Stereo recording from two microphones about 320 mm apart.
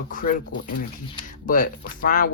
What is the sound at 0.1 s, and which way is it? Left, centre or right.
Speech, left.